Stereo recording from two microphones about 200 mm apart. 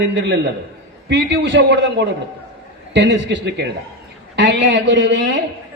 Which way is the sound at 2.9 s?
65° right (ahead or behind).